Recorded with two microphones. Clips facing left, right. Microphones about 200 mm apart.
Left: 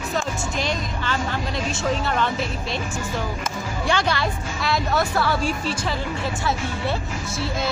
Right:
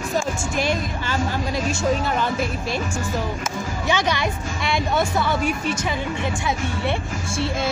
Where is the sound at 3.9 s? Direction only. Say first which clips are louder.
Right 1 dB; 15° right (ahead or behind).